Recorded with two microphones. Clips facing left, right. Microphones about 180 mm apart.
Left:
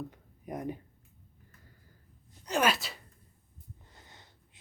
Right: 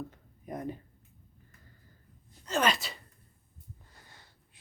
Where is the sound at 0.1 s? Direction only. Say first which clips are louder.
Left 1 dB; 10° left (ahead or behind).